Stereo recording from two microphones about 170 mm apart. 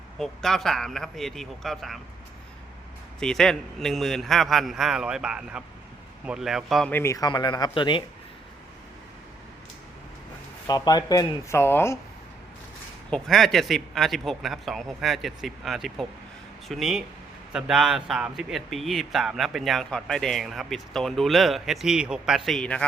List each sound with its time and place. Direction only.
0.2 s a man's voice: centre (ahead or behind)
3.2 s a man's voice: 5° left (ahead or behind)
6.9 s speech: 15° left (ahead or behind)
10.7 s speech: 25° left (ahead or behind)
13.1 s a man's voice: 5° left (ahead or behind)